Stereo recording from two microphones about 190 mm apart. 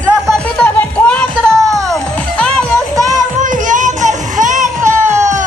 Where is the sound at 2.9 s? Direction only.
20° right (ahead or behind).